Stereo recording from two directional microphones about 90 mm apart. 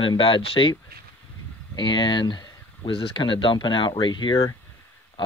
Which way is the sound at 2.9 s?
80° left.